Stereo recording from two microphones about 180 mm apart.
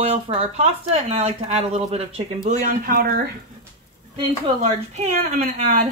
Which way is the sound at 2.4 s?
45° right (ahead or behind).